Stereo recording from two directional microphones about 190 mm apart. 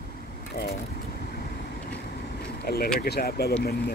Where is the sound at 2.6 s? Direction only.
55° left (ahead or behind).